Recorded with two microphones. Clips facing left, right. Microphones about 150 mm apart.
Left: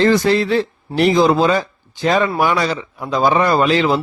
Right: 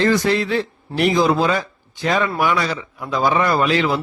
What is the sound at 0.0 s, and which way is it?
A man's voice, 30° left (ahead or behind).